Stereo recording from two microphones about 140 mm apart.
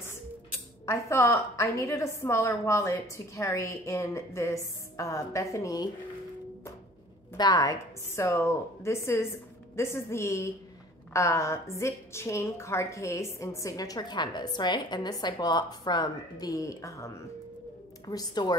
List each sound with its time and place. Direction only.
0.8 s a woman's voice: 20° left (ahead or behind)
7.3 s a woman's voice: 30° left (ahead or behind)